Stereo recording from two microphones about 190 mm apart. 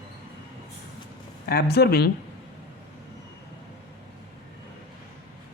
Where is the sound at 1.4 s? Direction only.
55° left (ahead or behind).